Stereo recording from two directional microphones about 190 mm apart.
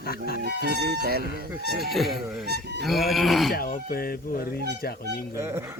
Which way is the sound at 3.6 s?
50° left (ahead or behind).